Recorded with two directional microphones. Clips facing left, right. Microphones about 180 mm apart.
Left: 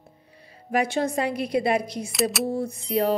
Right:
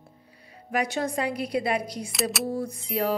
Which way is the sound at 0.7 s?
25° left (ahead or behind).